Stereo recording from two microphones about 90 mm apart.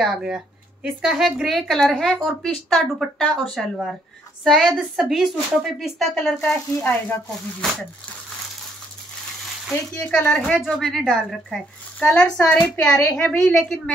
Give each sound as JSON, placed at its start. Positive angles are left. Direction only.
{"t": 0.0, "sound": "a woman's voice", "side_deg": -5}
{"t": 9.9, "sound": "a woman's voice", "side_deg": 20}
{"t": 12.0, "sound": "a woman's voice", "side_deg": 15}